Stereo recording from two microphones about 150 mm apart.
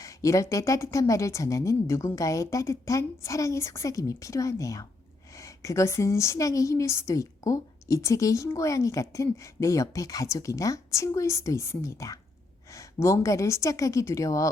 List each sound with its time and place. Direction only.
0.0 s a woman's voice: 20° left (ahead or behind)